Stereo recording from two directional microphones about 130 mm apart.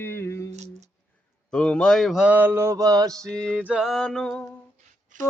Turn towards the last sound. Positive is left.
turn(degrees=-80)